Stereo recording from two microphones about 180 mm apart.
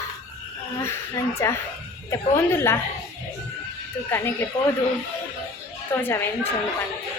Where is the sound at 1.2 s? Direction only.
15° left (ahead or behind).